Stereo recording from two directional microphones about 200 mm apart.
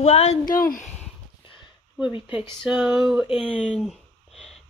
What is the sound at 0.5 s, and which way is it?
Speech, 40° left (ahead or behind).